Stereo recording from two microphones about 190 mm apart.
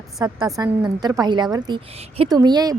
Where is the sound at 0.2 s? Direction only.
20° right (ahead or behind).